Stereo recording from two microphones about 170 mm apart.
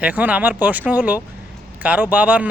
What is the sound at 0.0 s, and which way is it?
Speech, 10° right (ahead or behind).